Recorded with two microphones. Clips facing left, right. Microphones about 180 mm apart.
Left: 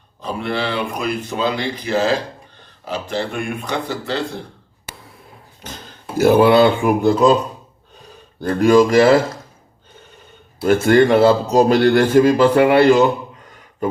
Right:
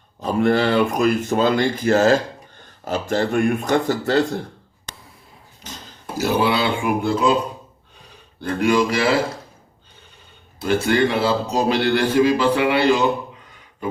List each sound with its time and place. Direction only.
0.2 s speech: 45° right (ahead or behind)
4.9 s writing: 5° left (ahead or behind)
5.6 s a sound: 55° left (ahead or behind)
6.1 s a man's voice: 50° left (ahead or behind)
8.4 s a man's voice: 40° left (ahead or behind)
10.7 s a man's voice: 45° left (ahead or behind)